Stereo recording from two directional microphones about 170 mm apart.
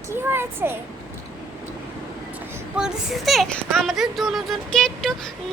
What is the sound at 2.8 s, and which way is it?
Speech, centre (ahead or behind).